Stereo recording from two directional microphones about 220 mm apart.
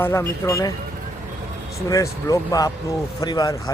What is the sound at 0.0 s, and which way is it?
Speech, 10° left (ahead or behind).